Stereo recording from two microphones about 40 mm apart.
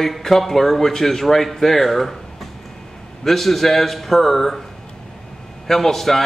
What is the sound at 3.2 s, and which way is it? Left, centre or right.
Speech, centre.